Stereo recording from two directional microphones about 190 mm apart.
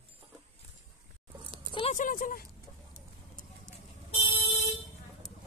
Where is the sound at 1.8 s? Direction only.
40° left (ahead or behind).